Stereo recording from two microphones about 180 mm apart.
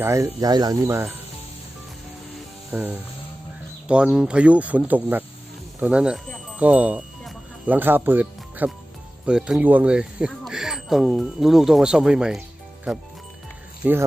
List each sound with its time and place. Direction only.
0.0 s speech: 15° right (ahead or behind)
2.7 s speech: 10° right (ahead or behind)
6.6 s music: 10° right (ahead or behind)
9.2 s speech: 5° right (ahead or behind)